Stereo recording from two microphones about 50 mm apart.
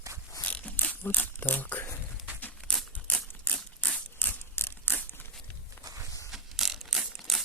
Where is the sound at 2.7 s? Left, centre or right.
Centre.